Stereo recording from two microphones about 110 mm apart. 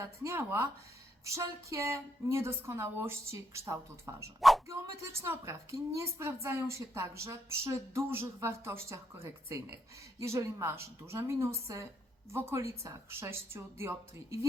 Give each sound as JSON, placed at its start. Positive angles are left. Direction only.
{"t": 0.0, "sound": "speech", "side_deg": -25}
{"t": 4.4, "sound": "speech", "side_deg": 0}
{"t": 4.7, "sound": "speech", "side_deg": -25}